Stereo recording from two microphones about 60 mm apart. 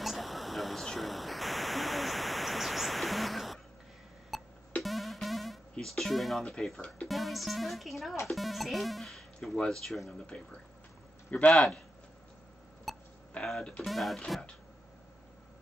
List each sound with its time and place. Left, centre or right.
0.0 s static: centre
4.3 s music: centre
7.1 s speech: centre
10.1 s a man's voice: centre
11.5 s speech: centre
12.9 s hiccup: centre
13.4 s speech: centre